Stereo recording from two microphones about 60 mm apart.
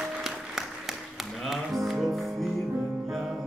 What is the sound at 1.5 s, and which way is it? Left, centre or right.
Music, centre.